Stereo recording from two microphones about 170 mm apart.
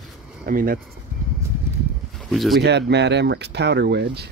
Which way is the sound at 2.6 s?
85° right.